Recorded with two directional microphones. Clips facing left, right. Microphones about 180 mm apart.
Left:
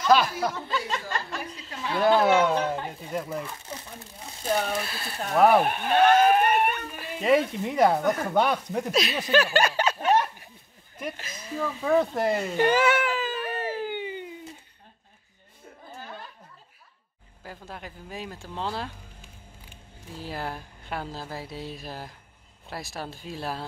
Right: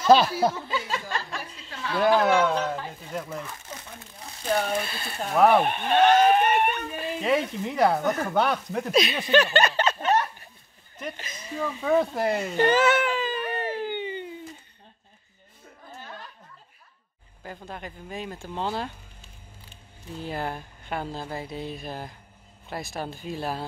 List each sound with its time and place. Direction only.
0.0 s speech: 30° right (ahead or behind)
0.7 s speech: 5° right (ahead or behind)
4.5 s speech: centre (ahead or behind)
12.5 s baby cry: 10° left (ahead or behind)
17.4 s speech: centre (ahead or behind)
20.2 s speech: centre (ahead or behind)